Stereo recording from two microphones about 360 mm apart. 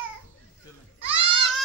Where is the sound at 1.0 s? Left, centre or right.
Centre.